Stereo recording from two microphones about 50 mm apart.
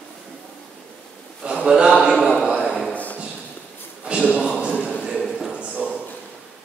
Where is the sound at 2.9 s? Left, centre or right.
Left.